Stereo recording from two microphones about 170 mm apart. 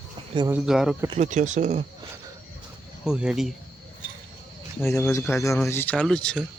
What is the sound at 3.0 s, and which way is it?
Speech, 5° right (ahead or behind).